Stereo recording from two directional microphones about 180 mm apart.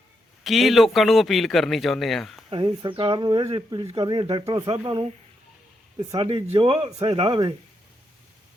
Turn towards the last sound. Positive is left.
turn(degrees=-30)  # may be behind; listen again after turning